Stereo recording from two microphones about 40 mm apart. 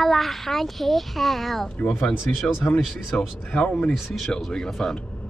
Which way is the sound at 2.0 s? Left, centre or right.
Left.